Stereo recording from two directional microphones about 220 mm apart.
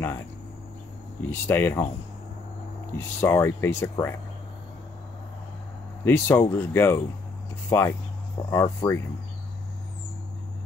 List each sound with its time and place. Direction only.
1.3 s speech: 10° left (ahead or behind)
3.0 s speech: 10° left (ahead or behind)
6.0 s speech: 10° left (ahead or behind)